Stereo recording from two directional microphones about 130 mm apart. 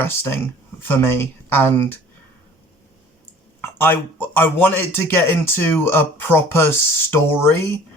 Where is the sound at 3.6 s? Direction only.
15° left (ahead or behind).